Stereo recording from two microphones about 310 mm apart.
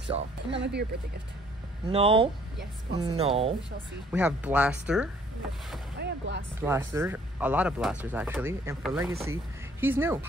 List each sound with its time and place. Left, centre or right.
0.5 s speech: right
1.9 s speech: centre
4.1 s speech: centre
5.9 s speech: right
6.6 s speech: centre